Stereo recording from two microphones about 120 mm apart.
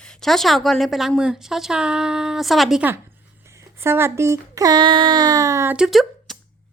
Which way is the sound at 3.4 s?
25° right (ahead or behind).